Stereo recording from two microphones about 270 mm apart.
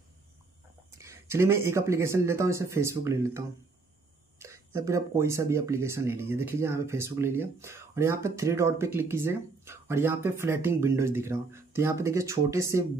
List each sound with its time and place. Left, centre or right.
0.9 s speech: centre